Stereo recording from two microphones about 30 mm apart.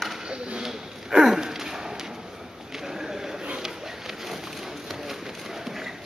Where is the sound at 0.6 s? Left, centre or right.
Centre.